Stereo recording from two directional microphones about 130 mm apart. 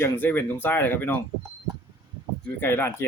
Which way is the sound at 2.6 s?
15° left (ahead or behind).